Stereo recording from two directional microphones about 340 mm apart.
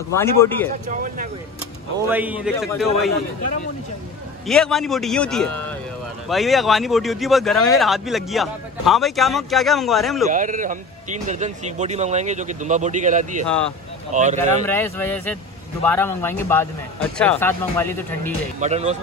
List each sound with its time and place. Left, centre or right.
0.4 s speech: centre
0.8 s a man's voice: right
2.0 s speech: centre
4.5 s speech: centre
10.3 s a man's voice: right
14.6 s speech: centre
18.6 s a man's voice: centre